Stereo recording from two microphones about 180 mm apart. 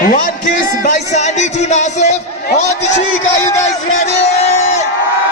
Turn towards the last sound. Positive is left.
turn(degrees=40)  # may be behind; listen again after turning